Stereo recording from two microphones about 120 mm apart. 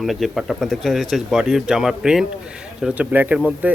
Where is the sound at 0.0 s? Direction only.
Centre (ahead or behind).